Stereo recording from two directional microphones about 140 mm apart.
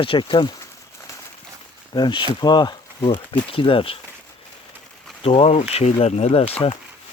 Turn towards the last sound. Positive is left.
turn(degrees=45)  # may be behind; listen again after turning